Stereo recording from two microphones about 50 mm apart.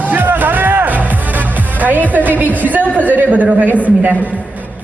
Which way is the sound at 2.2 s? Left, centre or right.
Right.